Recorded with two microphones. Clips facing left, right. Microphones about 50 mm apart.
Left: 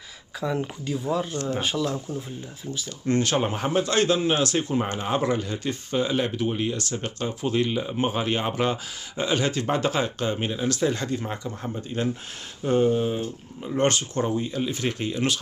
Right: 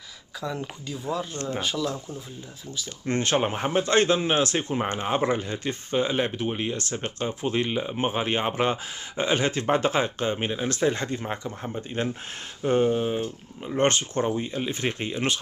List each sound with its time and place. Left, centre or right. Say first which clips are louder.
0.4 s speech: left 4 dB; centre
1.3 s speech: left 3 dB; right
1.6 s speech: left 1 dB; centre
3.1 s speech: left 1 dB; right
11.4 s speech: left 1 dB; centre
13.7 s speech: even; right